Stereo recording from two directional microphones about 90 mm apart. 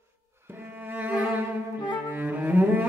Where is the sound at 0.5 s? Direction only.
25° right (ahead or behind).